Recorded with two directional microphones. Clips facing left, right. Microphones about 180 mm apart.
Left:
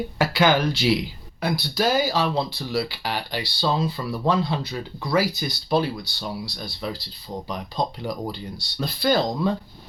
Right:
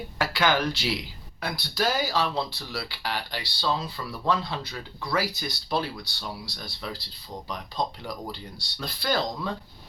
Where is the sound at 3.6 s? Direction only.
20° left (ahead or behind).